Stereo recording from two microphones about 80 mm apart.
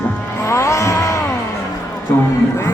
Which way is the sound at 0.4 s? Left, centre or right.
Left.